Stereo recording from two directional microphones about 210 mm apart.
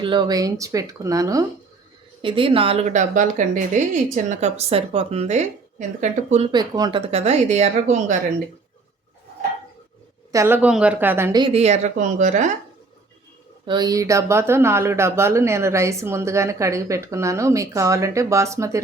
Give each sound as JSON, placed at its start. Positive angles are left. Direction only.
{"t": 0.0, "sound": "speech", "side_deg": -20}
{"t": 7.1, "sound": "a woman's voice", "side_deg": -30}
{"t": 10.3, "sound": "speech", "side_deg": -10}
{"t": 13.7, "sound": "speech", "side_deg": -20}